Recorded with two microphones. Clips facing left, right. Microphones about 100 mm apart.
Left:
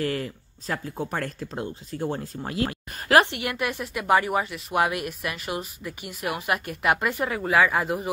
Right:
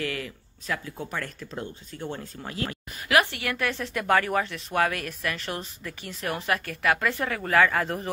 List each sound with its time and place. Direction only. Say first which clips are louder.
0.0 s speech: left 4 dB; 35° left (ahead or behind)
3.3 s a woman's voice: left 1 dB; 20° left (ahead or behind)